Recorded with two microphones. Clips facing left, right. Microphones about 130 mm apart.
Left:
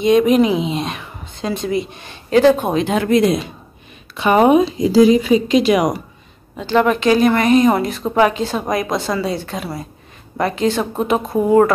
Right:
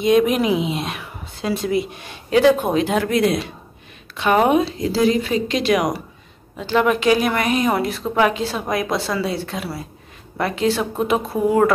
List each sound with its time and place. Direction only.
0.0 s a woman's voice: centre (ahead or behind)